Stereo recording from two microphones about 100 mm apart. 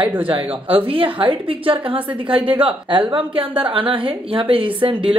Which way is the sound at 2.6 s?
60° right (ahead or behind).